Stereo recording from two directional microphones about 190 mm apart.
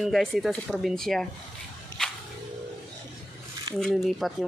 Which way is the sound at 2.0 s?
5° left (ahead or behind).